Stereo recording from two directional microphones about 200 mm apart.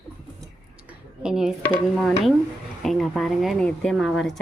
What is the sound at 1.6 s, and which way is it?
A woman's voice, centre (ahead or behind).